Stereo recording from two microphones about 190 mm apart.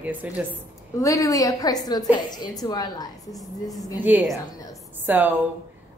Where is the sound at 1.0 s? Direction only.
15° left (ahead or behind).